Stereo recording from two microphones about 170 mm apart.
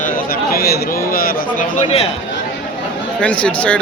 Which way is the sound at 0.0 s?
65° left (ahead or behind).